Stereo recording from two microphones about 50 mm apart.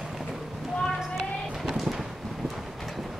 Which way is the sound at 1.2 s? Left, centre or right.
Centre.